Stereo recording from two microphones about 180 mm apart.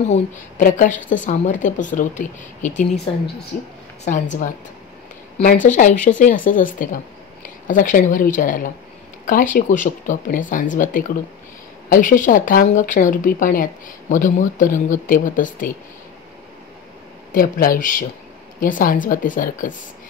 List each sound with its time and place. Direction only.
0.1 s speech: 45° left (ahead or behind)
4.0 s speech: 45° left (ahead or behind)
17.3 s speech: 50° left (ahead or behind)